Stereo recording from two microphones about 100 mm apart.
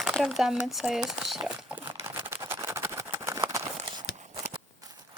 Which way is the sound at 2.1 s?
20° right (ahead or behind).